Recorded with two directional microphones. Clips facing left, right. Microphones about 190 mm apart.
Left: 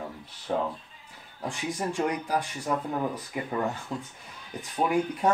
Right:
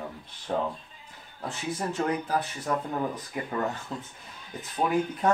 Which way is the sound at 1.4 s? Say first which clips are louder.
Left 1 dB; 15° left (ahead or behind).